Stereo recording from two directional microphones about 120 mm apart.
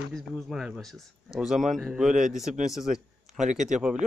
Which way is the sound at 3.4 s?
85° right.